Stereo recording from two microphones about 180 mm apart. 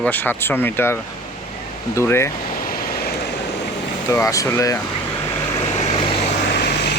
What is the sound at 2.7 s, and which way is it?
Vehicle, 55° left (ahead or behind).